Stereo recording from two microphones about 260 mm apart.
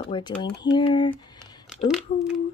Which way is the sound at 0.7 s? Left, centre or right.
Centre.